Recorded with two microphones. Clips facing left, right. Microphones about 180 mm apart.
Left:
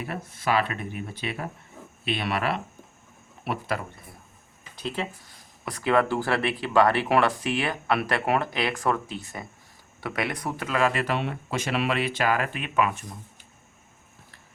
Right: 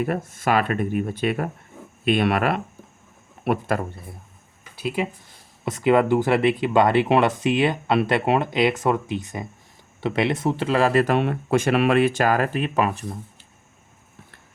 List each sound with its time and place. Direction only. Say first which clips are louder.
0.0 s speech: right 7 dB; 50° right (ahead or behind)
4.7 s a sound: right 6 dB; 10° right (ahead or behind)
5.6 s speech: right 5 dB; 20° right (ahead or behind)